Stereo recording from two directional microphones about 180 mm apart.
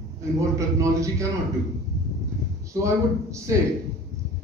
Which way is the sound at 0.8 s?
15° right (ahead or behind).